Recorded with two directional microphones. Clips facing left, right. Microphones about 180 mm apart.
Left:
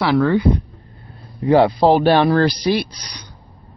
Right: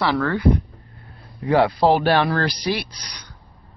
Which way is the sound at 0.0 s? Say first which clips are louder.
Left 5 dB; 15° left (ahead or behind).